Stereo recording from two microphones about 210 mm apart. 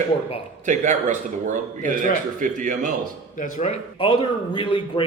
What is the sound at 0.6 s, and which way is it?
Speech, 35° right (ahead or behind).